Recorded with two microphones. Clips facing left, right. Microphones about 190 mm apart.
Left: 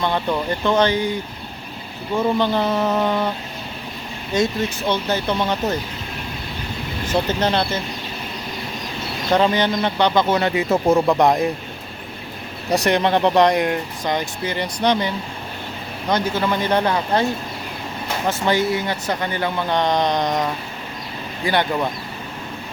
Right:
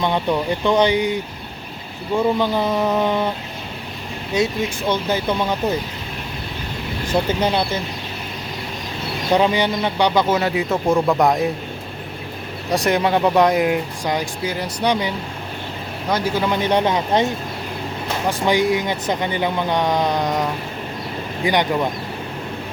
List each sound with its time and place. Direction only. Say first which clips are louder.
0.0 s speech: right 2 dB; 15° right (ahead or behind)
2.4 s speech: even; 10° right (ahead or behind)
4.9 s speech: right 1 dB; 10° right (ahead or behind)
7.1 s speech: right 1 dB; 10° right (ahead or behind)
9.3 s speech: even; 10° right (ahead or behind)
12.7 s speech: even; centre (ahead or behind); by 17.2 s 20° right (ahead or behind)
18.3 s speech: right 2 dB; 15° right (ahead or behind)